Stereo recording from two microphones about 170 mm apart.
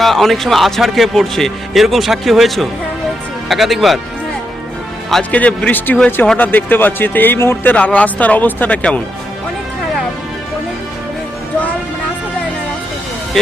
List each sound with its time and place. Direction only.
0.0 s speech: centre (ahead or behind)
5.1 s speech: 5° left (ahead or behind)
13.4 s speech: 5° left (ahead or behind)